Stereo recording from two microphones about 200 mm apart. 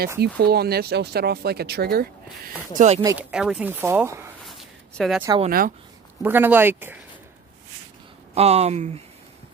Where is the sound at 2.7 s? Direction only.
35° right (ahead or behind).